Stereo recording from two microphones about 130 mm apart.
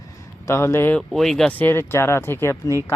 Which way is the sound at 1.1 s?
Centre (ahead or behind).